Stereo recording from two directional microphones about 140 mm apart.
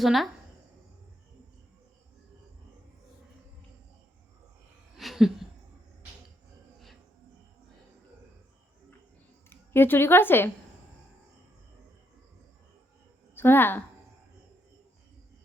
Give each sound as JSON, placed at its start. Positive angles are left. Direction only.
{"t": 0.0, "sound": "a woman's voice", "side_deg": 0}
{"t": 4.9, "sound": "a sound", "side_deg": 0}
{"t": 9.5, "sound": "a woman's voice", "side_deg": 15}
{"t": 13.3, "sound": "speech", "side_deg": 15}